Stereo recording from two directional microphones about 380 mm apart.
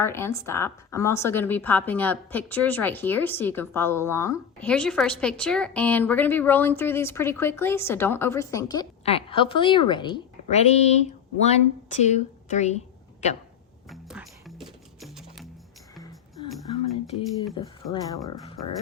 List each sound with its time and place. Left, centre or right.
0.0 s a woman's voice: centre
13.9 s music: centre
17.8 s a woman's voice: centre